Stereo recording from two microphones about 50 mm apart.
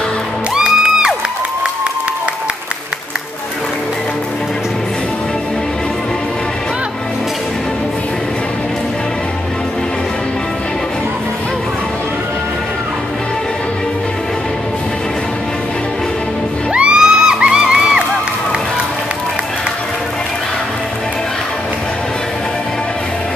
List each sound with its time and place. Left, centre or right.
0.6 s music: centre
16.7 s music: centre